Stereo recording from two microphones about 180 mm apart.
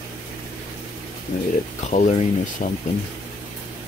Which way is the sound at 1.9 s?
40° left (ahead or behind).